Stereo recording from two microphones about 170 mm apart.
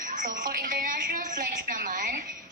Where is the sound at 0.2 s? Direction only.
50° right (ahead or behind).